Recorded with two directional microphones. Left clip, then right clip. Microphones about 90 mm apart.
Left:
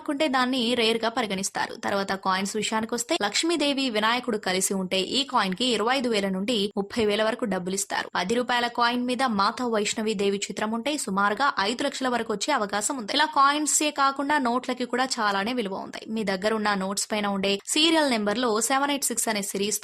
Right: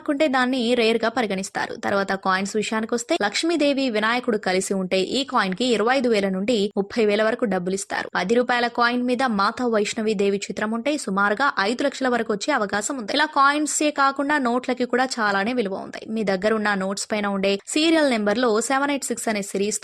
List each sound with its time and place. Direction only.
0.1 s speech: 40° right (ahead or behind)